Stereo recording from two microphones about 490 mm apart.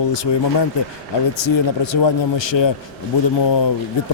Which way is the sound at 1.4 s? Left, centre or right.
Left.